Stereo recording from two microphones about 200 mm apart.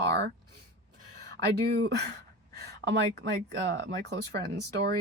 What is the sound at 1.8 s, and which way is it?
Speech, 55° right (ahead or behind).